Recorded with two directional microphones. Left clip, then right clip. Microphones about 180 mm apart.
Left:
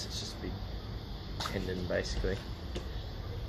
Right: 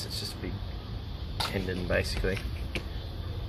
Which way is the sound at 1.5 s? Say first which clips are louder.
Right 4 dB; 35° right (ahead or behind).